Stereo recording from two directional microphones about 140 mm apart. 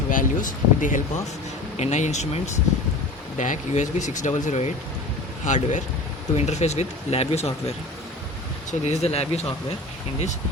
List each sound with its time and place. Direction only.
0.1 s speech: 70° left (ahead or behind)
1.7 s speech: 55° left (ahead or behind)
8.8 s speech: 50° left (ahead or behind)